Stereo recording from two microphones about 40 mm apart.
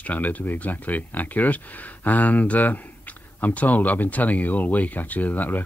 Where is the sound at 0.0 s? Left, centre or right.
Left.